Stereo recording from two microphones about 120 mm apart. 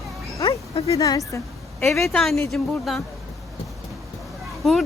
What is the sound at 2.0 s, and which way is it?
Speech, centre (ahead or behind).